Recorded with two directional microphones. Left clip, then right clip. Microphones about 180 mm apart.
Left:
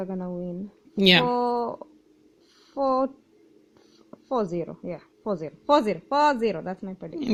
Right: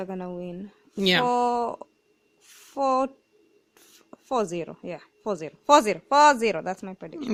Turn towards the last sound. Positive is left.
turn(degrees=-45)  # may be behind; listen again after turning